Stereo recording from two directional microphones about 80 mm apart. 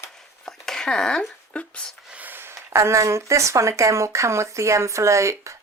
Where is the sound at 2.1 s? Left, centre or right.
Right.